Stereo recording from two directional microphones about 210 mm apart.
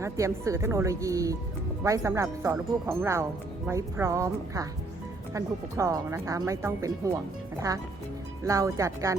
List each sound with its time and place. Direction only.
0.0 s speech: 15° right (ahead or behind)
8.4 s speech: 15° right (ahead or behind)